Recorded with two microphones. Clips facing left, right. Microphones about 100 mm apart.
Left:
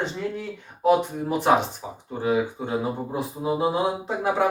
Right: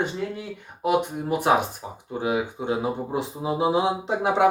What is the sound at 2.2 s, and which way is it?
Mantra, 15° right (ahead or behind).